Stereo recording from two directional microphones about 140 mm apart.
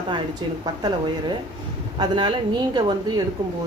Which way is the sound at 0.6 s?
30° right (ahead or behind).